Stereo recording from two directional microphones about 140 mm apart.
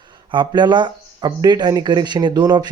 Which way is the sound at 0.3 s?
35° right (ahead or behind).